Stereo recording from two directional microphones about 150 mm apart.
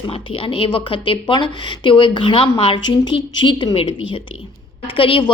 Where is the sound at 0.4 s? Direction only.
35° left (ahead or behind).